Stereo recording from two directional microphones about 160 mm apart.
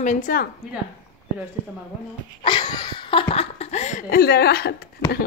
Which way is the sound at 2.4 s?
30° left (ahead or behind).